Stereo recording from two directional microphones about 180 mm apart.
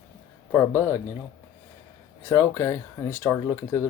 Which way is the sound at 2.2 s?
15° left (ahead or behind).